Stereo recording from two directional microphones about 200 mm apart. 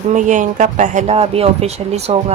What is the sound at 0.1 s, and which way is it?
Speech, 40° right (ahead or behind).